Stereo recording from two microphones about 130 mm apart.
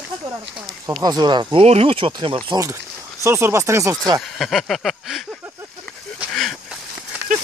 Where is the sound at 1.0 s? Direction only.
35° right (ahead or behind).